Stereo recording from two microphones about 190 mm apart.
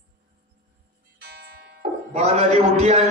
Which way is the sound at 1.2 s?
55° right (ahead or behind).